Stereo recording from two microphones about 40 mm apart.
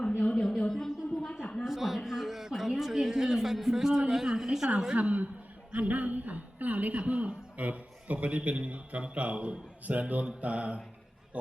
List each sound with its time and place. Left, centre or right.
0.2 s speech: left
0.7 s a sound: centre
1.6 s speech: centre
4.9 s a man's voice: right